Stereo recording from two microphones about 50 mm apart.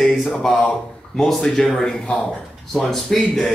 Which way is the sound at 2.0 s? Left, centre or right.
Left.